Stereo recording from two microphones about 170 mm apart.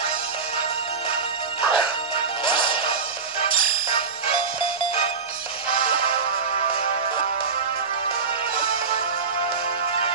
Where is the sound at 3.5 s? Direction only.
55° right (ahead or behind).